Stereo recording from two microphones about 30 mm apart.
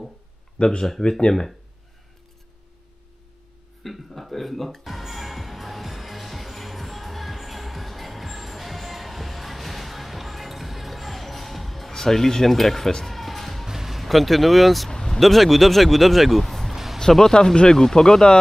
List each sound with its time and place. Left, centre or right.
0.6 s speech: left
3.8 s speech: centre
4.8 s music: centre
11.9 s speech: centre
13.0 s music: centre
13.7 s music: centre
14.0 s speech: centre
14.9 s vehicle: left
15.1 s speech: centre
16.7 s a sound: centre
17.2 s speech: centre